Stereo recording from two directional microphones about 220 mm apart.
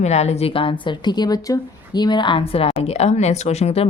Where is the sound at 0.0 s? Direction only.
30° left (ahead or behind).